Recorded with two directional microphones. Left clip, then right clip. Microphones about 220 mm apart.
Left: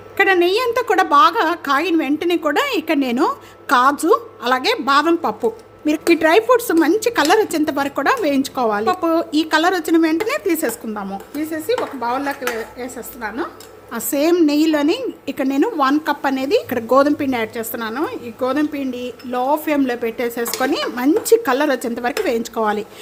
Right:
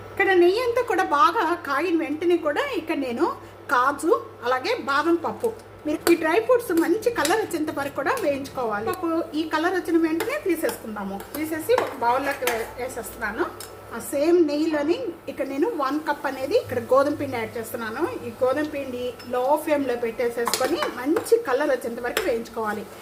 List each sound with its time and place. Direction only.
0.2 s a woman's voice: 45° left (ahead or behind)
11.7 s a woman's voice: 45° left (ahead or behind)